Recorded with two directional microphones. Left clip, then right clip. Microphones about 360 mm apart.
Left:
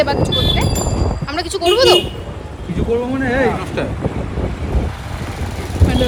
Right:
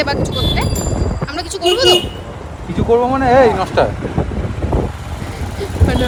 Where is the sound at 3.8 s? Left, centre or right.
Centre.